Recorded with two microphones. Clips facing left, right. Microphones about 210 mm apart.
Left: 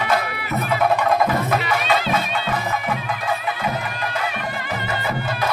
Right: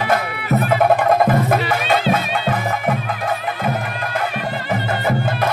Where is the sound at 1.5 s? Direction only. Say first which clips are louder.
Right 3 dB; 50° right (ahead or behind).